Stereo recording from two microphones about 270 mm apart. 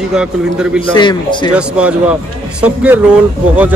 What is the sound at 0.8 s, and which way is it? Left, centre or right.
Speech, centre.